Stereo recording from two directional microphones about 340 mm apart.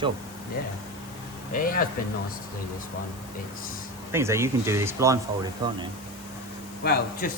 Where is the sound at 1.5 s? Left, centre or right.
Left.